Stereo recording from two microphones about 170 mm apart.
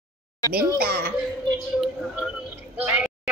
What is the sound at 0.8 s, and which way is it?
Speech, 60° right (ahead or behind).